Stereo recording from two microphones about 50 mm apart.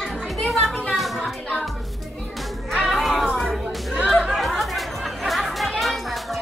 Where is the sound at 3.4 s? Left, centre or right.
Centre.